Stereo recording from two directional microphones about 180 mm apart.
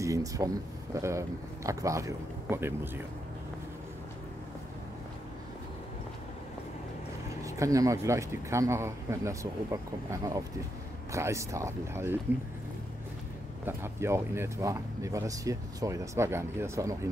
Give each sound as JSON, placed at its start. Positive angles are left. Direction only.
{"t": 0.0, "sound": "speech", "side_deg": -20}
{"t": 7.4, "sound": "speech", "side_deg": -15}
{"t": 13.7, "sound": "speech", "side_deg": -15}